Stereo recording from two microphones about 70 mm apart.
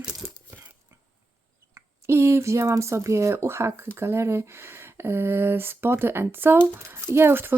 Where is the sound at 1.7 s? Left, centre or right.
Right.